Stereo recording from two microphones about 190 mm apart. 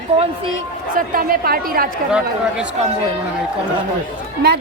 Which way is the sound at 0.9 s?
50° right (ahead or behind).